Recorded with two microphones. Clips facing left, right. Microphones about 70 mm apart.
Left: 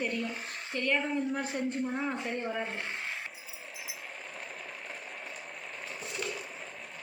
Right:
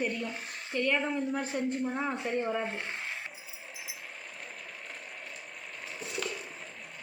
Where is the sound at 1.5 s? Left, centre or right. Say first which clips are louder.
Right 2 dB; centre.